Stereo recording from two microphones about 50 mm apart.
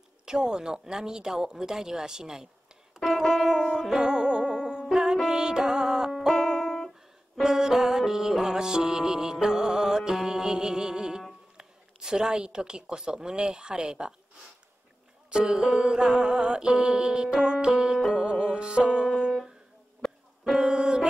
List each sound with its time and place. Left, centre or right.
0.2 s music: centre
6.1 s music: centre
7.4 s music: centre
11.5 s a woman's voice: centre
15.2 s music: centre
20.6 s music: right